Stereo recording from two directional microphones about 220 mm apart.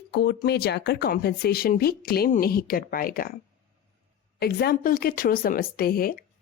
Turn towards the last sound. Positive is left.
turn(degrees=40)  # may be behind; listen again after turning